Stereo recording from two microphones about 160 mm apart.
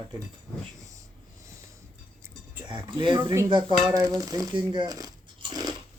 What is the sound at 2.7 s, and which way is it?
Speech, 30° right (ahead or behind).